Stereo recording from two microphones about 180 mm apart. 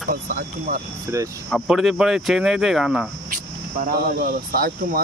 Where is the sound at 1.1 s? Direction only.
15° right (ahead or behind).